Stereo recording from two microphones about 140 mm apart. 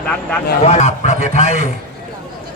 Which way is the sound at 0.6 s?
55° left (ahead or behind).